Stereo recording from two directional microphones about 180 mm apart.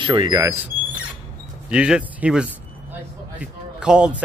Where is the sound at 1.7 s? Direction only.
5° right (ahead or behind).